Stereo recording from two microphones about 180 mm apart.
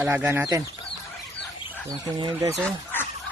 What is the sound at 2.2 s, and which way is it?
Speech, 25° right (ahead or behind).